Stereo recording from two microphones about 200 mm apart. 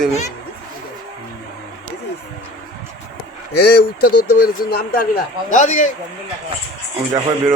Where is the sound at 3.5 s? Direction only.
50° left (ahead or behind).